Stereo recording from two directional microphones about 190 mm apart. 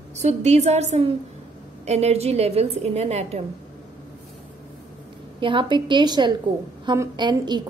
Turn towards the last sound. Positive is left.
turn(degrees=-25)  # may be behind; listen again after turning